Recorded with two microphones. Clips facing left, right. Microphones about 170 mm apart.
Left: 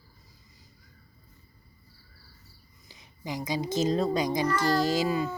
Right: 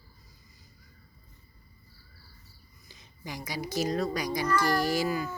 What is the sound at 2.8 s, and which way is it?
A child's voice, 15° left (ahead or behind).